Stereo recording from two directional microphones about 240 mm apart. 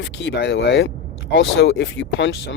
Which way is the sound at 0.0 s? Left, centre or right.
Left.